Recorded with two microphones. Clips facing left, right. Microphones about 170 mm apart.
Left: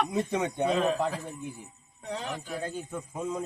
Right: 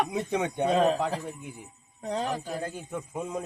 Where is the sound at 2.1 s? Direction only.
40° right (ahead or behind).